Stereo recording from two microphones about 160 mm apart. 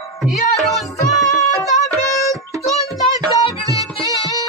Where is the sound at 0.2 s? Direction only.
Centre (ahead or behind).